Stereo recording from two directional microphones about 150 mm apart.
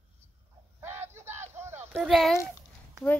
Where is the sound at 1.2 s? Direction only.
50° right (ahead or behind).